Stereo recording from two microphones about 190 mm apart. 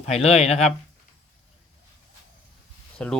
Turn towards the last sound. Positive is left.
turn(degrees=5)  # may be behind; listen again after turning